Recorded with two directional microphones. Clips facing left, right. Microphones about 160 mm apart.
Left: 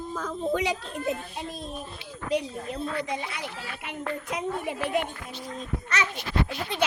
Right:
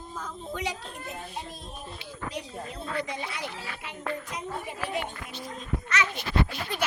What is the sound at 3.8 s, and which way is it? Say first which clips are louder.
A woman's voice: left 2 dB; 60° left (ahead or behind).